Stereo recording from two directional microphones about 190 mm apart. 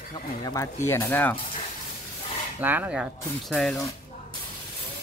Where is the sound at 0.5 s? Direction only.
15° left (ahead or behind).